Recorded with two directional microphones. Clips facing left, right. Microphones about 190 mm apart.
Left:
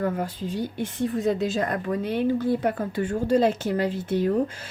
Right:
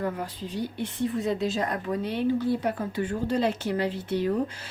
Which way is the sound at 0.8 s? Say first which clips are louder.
Left 1 dB; 45° left (ahead or behind).